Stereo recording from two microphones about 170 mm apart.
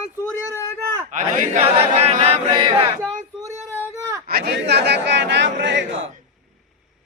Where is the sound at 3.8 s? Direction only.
20° right (ahead or behind).